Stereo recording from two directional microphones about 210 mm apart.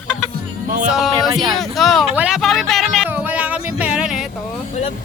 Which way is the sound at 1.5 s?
Centre (ahead or behind).